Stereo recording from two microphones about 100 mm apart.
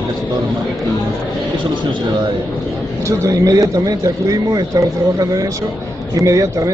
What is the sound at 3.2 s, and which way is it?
Speech, 35° right (ahead or behind).